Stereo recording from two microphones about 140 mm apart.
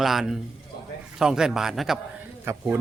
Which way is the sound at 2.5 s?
15° right (ahead or behind).